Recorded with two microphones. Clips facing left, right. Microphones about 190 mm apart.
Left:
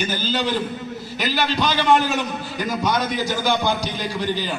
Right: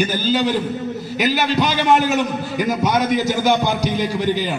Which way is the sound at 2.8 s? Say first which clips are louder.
Right 4 dB; 15° right (ahead or behind).